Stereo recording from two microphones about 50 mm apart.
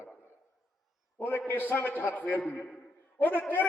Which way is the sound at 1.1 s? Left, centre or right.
Left.